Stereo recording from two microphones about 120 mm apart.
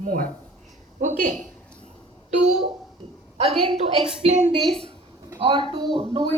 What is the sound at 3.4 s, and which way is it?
Speech, 50° right (ahead or behind).